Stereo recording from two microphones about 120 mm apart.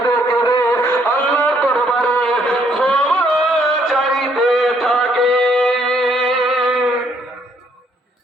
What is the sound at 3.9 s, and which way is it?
Music, 5° left (ahead or behind).